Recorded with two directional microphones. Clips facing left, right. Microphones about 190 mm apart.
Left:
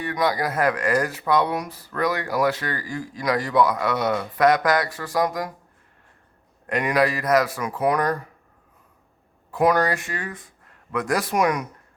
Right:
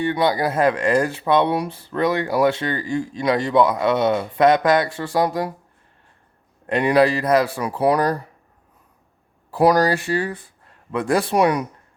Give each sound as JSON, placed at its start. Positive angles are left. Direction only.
{"t": 0.0, "sound": "speech", "side_deg": -30}
{"t": 6.7, "sound": "speech", "side_deg": -30}
{"t": 9.5, "sound": "speech", "side_deg": -35}